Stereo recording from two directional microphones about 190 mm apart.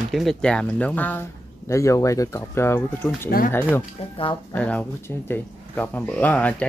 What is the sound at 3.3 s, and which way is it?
Speech, 50° left (ahead or behind).